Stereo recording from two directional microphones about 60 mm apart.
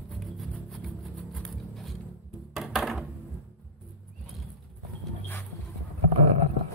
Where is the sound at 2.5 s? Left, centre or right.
Centre.